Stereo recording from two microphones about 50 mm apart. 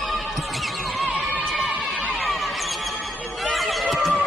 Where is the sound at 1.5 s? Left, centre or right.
Centre.